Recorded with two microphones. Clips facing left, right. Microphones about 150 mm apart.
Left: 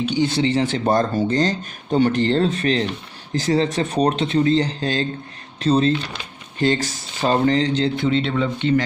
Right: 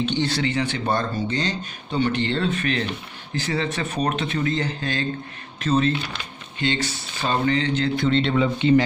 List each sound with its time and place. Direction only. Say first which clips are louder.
0.0 s speech: left 3 dB; 10° left (ahead or behind)
0.4 s speech: left 5 dB; 35° left (ahead or behind)
8.0 s speech: even; 5° left (ahead or behind)
8.5 s a man's voice: right 3 dB; 15° right (ahead or behind)